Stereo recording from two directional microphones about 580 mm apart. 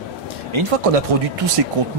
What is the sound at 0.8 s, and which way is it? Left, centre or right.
Speech, right.